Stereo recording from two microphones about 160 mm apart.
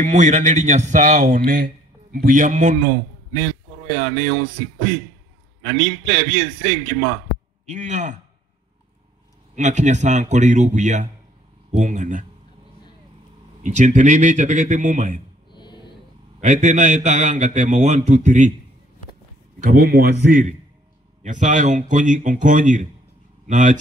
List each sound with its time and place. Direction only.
0.0 s a man's voice: 50° right (ahead or behind)
5.6 s a man's voice: 50° right (ahead or behind)
7.6 s a man's voice: 50° right (ahead or behind)
9.6 s a man's voice: 50° right (ahead or behind)
13.6 s a man's voice: 50° right (ahead or behind)
15.5 s a sound: 30° left (ahead or behind)
16.3 s a man's voice: 45° right (ahead or behind)
19.6 s a man's voice: 65° right (ahead or behind)